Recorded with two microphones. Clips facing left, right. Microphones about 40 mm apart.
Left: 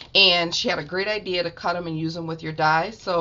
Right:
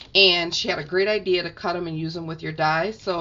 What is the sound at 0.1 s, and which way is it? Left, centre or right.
Speech, centre.